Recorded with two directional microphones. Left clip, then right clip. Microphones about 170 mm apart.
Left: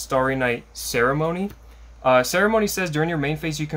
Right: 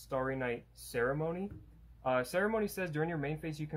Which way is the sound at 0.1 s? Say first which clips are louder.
Left 14 dB; 10° left (ahead or behind).